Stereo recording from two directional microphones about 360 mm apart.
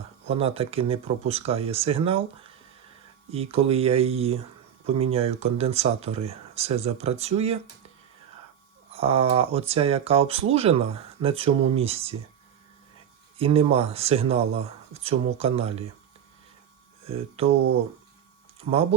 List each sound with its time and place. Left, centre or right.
0.3 s speech: centre
8.9 s speech: centre
13.4 s speech: centre
18.7 s speech: centre